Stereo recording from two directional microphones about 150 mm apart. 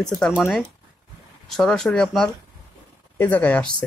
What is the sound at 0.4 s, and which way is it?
Speech, centre (ahead or behind).